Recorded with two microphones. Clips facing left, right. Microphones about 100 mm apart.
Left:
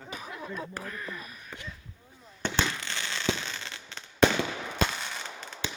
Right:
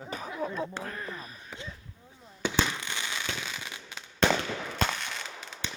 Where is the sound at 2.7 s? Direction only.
15° right (ahead or behind).